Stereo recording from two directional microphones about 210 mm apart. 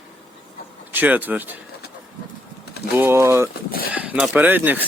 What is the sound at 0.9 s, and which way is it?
Speech, 10° right (ahead or behind).